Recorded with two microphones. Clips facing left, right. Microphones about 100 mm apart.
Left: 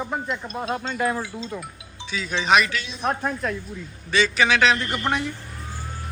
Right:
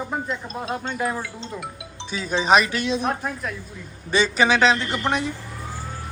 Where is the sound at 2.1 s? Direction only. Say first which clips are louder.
Right 2 dB; 35° right (ahead or behind).